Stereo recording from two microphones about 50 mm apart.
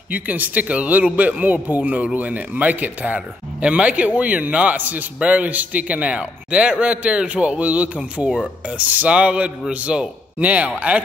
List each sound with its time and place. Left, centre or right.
0.1 s a man's voice: right